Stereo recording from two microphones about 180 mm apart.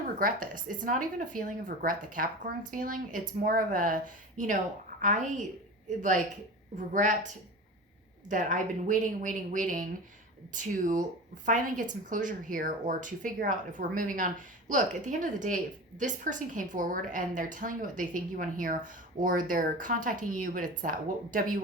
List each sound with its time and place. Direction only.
0.2 s a woman's voice: 50° right (ahead or behind)
6.7 s a woman's voice: 45° right (ahead or behind)
8.3 s a woman's voice: 45° right (ahead or behind)